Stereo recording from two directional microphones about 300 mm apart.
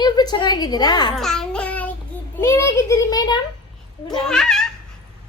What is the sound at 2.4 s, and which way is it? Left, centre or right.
A woman's voice, centre.